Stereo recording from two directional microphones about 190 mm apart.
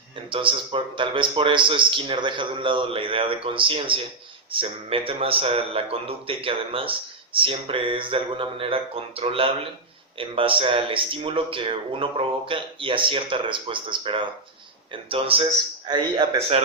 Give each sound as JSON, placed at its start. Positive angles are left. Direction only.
{"t": 0.3, "sound": "speech", "side_deg": -25}